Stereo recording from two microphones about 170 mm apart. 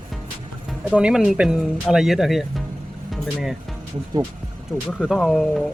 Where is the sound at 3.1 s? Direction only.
Centre (ahead or behind).